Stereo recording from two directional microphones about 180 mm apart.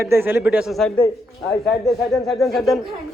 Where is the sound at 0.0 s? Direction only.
15° right (ahead or behind).